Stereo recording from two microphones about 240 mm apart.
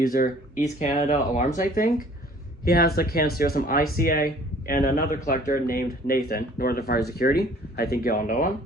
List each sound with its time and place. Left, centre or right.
0.0 s speech: left